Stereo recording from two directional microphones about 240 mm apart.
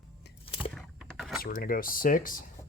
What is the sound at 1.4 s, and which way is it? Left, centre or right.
Speech, left.